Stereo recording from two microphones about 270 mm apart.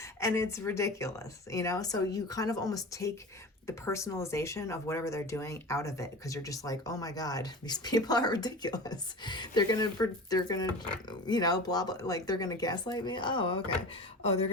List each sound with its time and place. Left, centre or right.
0.0 s speech: centre